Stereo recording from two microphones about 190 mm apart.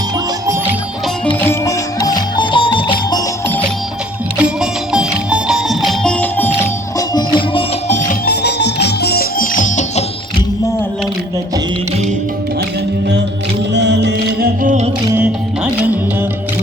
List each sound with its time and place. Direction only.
1.4 s music: 15° left (ahead or behind)
4.4 s music: 5° right (ahead or behind)
7.3 s music: 30° left (ahead or behind)
8.2 s music: 60° left (ahead or behind); by 10.0 s 40° left (ahead or behind)
13.7 s music: 65° right (ahead or behind); by 14.8 s 45° right (ahead or behind)
15.1 s music: 5° right (ahead or behind)